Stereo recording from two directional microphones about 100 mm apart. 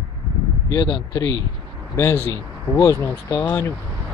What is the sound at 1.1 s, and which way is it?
Speech, 35° left (ahead or behind).